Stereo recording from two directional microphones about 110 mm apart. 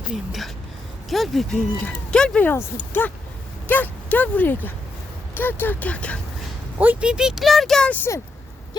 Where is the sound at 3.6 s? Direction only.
15° left (ahead or behind).